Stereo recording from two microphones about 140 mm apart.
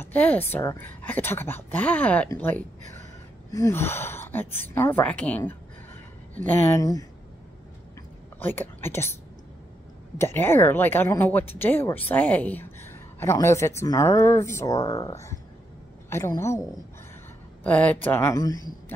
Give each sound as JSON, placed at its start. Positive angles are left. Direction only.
{"t": 0.0, "sound": "a woman's voice", "side_deg": 10}
{"t": 8.4, "sound": "a woman's voice", "side_deg": 15}
{"t": 17.6, "sound": "a woman's voice", "side_deg": 10}